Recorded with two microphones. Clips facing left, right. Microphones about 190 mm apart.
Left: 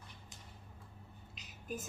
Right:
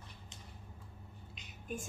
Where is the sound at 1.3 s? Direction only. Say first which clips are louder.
Even; centre (ahead or behind).